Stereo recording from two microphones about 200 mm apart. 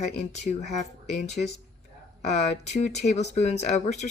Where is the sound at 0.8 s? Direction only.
35° left (ahead or behind).